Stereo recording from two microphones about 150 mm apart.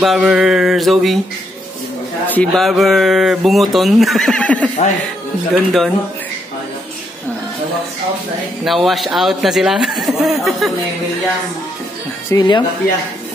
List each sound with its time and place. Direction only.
0.0 s speech: 5° right (ahead or behind)
2.2 s speech: 10° left (ahead or behind)
2.6 s speech: centre (ahead or behind)
8.6 s speech: centre (ahead or behind)
12.3 s speech: 30° left (ahead or behind)